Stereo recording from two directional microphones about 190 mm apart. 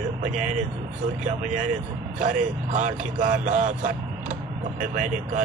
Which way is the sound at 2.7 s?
45° right (ahead or behind).